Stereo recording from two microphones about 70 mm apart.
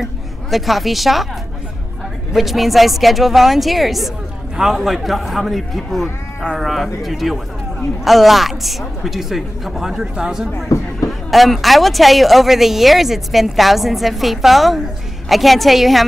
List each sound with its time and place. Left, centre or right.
0.0 s speech: centre
2.3 s speech: centre
10.7 s a sound: left
11.1 s speech: centre